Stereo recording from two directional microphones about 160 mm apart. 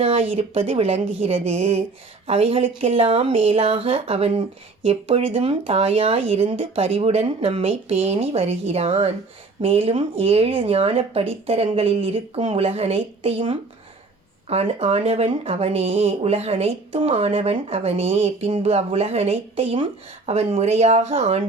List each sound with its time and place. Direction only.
0.0 s speech: 35° right (ahead or behind)